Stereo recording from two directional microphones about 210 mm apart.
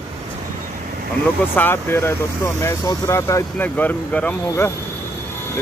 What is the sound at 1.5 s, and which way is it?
Speech, 10° left (ahead or behind).